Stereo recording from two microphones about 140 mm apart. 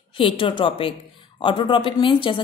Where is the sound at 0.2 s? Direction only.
35° left (ahead or behind).